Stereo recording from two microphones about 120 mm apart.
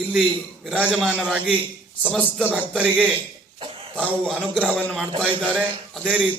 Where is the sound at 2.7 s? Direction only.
10° right (ahead or behind).